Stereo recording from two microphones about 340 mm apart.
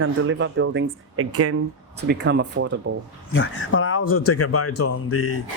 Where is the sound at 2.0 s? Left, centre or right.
Right.